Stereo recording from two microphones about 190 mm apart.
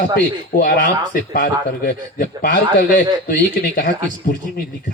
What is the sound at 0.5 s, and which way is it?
Speech, 50° left (ahead or behind).